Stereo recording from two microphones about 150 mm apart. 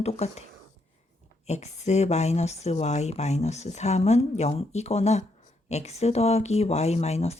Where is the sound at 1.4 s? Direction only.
45° left (ahead or behind).